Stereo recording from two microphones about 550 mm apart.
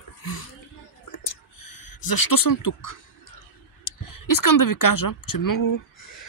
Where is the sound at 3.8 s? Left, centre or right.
Left.